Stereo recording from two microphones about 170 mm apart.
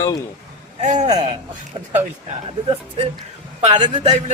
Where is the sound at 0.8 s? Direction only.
45° right (ahead or behind).